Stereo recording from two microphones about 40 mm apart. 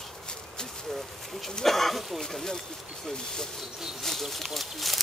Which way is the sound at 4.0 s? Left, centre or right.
Centre.